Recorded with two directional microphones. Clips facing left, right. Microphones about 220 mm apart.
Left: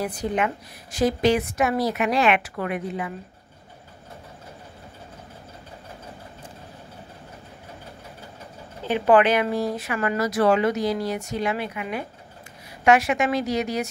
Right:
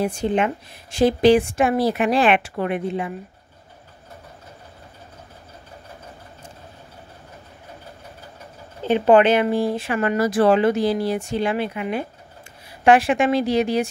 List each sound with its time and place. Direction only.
0.0 s speech: 25° right (ahead or behind)
8.8 s a woman's voice: 25° right (ahead or behind)